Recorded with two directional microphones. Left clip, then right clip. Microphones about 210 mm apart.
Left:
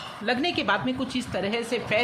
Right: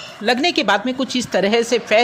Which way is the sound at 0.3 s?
35° right (ahead or behind).